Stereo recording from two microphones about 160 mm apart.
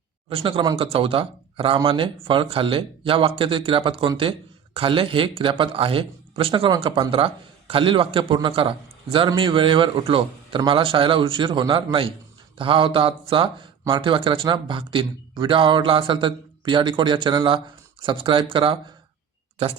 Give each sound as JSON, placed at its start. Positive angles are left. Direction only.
{"t": 0.3, "sound": "a man's voice", "side_deg": -35}